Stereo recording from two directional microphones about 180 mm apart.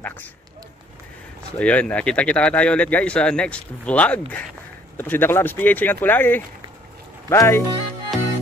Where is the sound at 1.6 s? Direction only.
5° left (ahead or behind).